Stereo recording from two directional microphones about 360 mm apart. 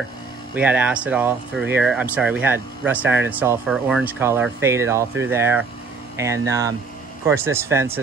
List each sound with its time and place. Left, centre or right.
0.6 s speech: centre